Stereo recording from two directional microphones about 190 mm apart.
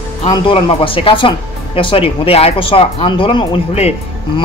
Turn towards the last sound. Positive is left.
turn(degrees=30)  # may be behind; listen again after turning